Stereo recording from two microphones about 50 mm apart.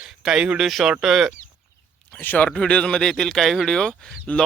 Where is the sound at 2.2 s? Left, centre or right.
Left.